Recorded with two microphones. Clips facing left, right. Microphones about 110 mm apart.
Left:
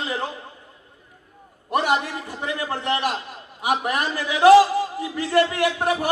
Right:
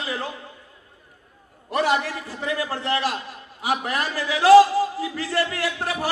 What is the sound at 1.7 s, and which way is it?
A man's voice, 20° left (ahead or behind).